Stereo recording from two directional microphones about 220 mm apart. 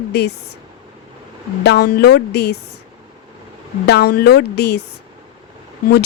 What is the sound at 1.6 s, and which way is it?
Speech, 45° left (ahead or behind).